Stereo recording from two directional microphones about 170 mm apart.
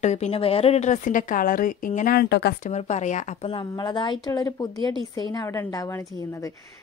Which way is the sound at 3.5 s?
25° left (ahead or behind).